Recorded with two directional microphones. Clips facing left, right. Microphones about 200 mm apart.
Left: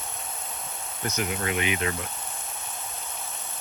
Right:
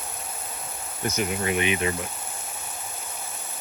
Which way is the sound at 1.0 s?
15° right (ahead or behind).